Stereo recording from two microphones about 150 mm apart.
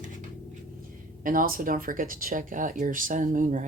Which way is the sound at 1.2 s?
70° right (ahead or behind).